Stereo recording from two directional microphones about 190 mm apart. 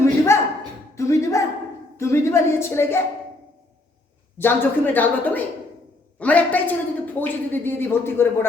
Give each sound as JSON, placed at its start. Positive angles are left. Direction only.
{"t": 0.3, "sound": "a sound", "side_deg": 15}
{"t": 2.0, "sound": "a woman's voice", "side_deg": 15}
{"t": 4.4, "sound": "a woman's voice", "side_deg": 10}